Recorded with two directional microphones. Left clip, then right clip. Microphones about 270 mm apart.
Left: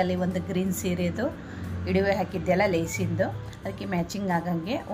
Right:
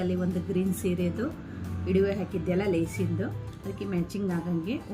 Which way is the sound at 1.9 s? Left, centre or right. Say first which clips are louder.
Left 2 dB; centre.